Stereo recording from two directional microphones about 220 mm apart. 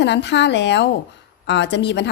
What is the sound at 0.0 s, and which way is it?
A woman's voice, 50° left (ahead or behind).